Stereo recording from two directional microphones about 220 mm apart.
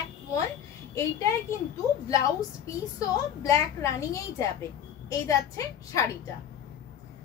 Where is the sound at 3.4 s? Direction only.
15° left (ahead or behind).